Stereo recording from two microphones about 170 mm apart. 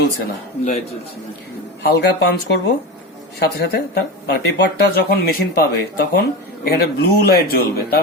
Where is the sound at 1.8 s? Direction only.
70° left (ahead or behind).